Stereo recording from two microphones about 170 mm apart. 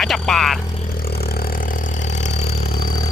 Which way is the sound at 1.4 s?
50° left (ahead or behind).